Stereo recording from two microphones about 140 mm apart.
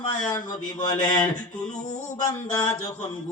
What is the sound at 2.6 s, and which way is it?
Speech, 25° left (ahead or behind).